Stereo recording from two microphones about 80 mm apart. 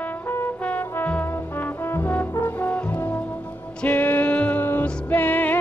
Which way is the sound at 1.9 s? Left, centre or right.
Left.